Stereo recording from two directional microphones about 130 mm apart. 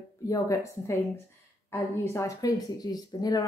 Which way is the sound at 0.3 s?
25° left (ahead or behind).